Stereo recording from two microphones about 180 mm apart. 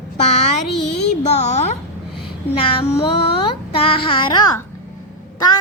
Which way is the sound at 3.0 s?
30° left (ahead or behind).